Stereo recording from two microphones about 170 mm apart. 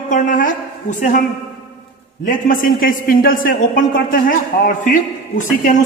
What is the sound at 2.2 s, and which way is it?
A man's voice, 55° left (ahead or behind).